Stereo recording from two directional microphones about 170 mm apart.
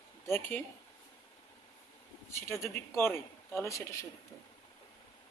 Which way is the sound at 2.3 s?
15° left (ahead or behind).